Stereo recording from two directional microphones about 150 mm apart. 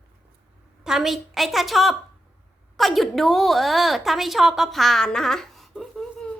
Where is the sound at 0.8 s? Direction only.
5° right (ahead or behind).